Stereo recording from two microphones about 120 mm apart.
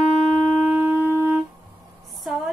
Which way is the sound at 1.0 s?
20° right (ahead or behind).